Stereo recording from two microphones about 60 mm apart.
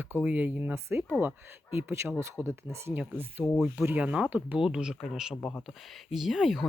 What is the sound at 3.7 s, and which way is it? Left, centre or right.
Speech, right.